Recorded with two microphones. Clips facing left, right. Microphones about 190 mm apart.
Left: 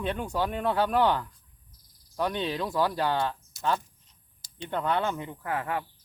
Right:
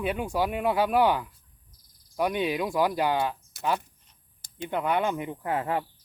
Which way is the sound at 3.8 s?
60° right (ahead or behind).